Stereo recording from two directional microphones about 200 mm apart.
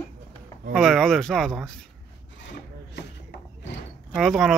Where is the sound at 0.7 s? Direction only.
Centre (ahead or behind).